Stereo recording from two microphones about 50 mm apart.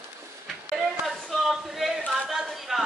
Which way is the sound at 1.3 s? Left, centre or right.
Centre.